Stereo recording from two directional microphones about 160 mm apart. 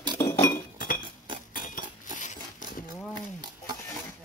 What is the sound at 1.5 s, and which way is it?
Cutlery, 60° left (ahead or behind).